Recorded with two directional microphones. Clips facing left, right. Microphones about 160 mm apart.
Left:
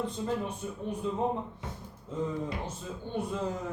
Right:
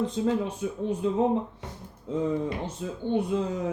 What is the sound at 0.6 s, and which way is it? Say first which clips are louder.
Speech: right 7 dB; 90° right.